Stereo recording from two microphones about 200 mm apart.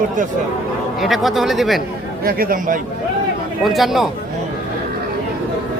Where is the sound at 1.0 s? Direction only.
Centre (ahead or behind).